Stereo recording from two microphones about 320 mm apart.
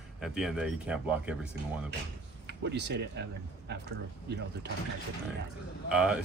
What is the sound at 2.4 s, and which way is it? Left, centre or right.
Speech, right.